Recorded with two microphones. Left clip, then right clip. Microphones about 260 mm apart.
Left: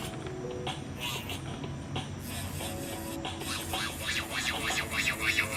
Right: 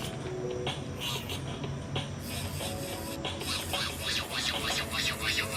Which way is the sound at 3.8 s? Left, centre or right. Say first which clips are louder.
Right 1 dB; centre.